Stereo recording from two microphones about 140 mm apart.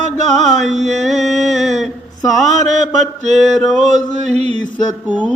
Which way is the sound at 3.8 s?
55° right (ahead or behind).